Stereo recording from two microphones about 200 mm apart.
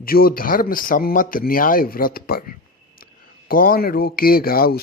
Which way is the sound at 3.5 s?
45° left (ahead or behind).